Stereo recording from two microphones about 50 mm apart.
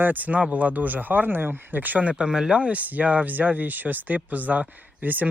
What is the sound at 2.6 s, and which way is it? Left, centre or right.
Speech, right.